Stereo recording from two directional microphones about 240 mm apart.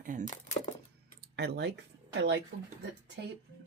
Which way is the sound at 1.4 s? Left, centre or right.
Right.